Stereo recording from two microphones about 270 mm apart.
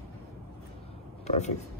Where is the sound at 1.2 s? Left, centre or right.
Left.